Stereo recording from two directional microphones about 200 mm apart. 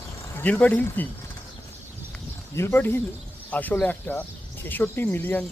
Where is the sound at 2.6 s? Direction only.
10° left (ahead or behind).